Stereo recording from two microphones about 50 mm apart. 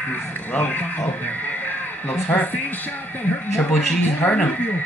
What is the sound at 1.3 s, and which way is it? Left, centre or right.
Music, left.